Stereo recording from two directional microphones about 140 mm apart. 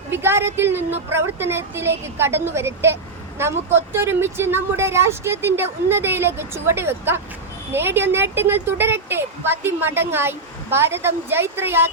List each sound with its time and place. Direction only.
0.1 s a woman's voice: 15° right (ahead or behind)